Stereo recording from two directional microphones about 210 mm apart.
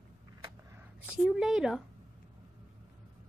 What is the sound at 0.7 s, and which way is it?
A woman's voice, 5° right (ahead or behind).